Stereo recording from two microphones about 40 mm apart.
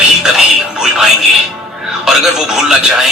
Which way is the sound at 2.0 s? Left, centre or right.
Centre.